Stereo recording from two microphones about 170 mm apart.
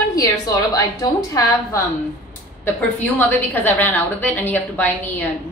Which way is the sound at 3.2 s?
10° left (ahead or behind).